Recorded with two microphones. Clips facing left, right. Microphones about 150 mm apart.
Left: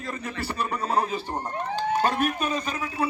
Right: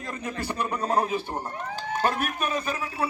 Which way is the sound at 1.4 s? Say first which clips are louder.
Left 5 dB; 15° left (ahead or behind).